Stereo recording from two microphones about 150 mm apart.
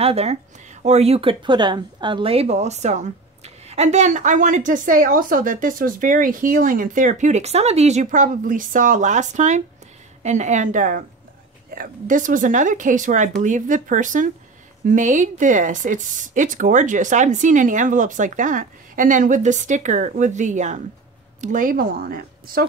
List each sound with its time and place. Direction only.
0.0 s a woman's voice: 45° right (ahead or behind); by 22.7 s 75° right (ahead or behind)